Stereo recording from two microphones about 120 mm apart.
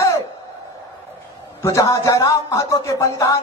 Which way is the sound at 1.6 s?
25° left (ahead or behind).